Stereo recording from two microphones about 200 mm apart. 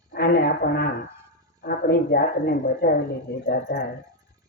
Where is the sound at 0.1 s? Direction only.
50° left (ahead or behind).